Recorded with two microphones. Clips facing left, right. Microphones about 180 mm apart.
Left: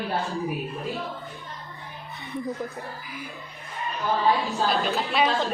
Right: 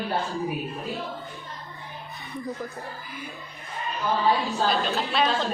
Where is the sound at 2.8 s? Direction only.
Centre (ahead or behind).